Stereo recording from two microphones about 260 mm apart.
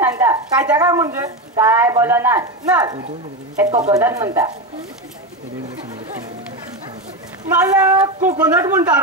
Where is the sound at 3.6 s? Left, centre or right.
Right.